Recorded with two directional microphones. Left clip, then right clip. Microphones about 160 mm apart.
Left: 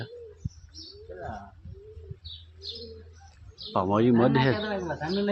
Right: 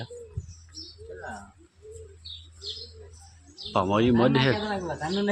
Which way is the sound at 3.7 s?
Centre (ahead or behind).